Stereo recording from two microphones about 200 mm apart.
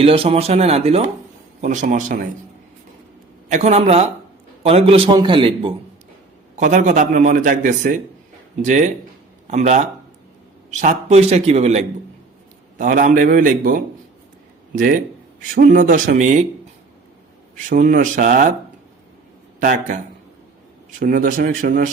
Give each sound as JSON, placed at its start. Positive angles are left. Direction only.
{"t": 0.0, "sound": "a man's voice", "side_deg": -30}
{"t": 3.5, "sound": "a man's voice", "side_deg": -35}
{"t": 6.6, "sound": "a man's voice", "side_deg": -40}
{"t": 17.7, "sound": "a man's voice", "side_deg": -40}
{"t": 19.5, "sound": "a man's voice", "side_deg": -40}
{"t": 21.0, "sound": "speech", "side_deg": -45}